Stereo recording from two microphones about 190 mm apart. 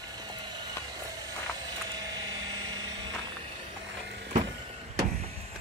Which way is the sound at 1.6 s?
20° right (ahead or behind).